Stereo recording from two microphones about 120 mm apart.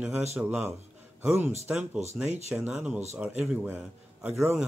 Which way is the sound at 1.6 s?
10° right (ahead or behind).